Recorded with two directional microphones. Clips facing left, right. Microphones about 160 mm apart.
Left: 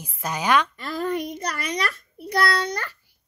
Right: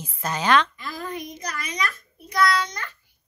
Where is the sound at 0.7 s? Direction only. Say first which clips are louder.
Left 6 dB; 65° left (ahead or behind).